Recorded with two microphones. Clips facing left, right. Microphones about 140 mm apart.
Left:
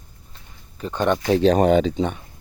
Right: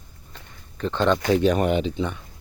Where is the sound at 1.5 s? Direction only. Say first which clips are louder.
Left 5 dB; 35° left (ahead or behind).